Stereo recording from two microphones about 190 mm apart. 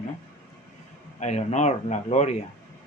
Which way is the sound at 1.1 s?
35° left (ahead or behind).